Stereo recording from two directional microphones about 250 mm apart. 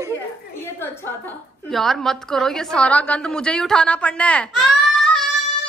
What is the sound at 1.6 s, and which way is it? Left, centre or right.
A woman's voice, centre.